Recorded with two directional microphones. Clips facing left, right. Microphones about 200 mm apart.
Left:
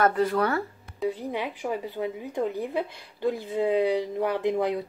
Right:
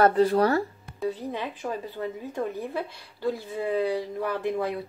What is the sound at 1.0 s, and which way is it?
Speech, 15° left (ahead or behind).